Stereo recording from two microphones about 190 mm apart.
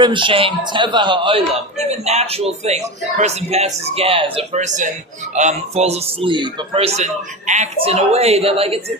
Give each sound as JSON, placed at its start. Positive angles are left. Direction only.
{"t": 0.0, "sound": "a man's voice", "side_deg": -25}